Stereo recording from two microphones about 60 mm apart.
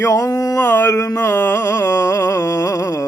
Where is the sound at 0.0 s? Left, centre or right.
Left.